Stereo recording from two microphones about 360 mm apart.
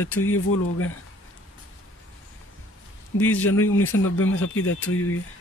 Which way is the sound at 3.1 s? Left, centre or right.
Left.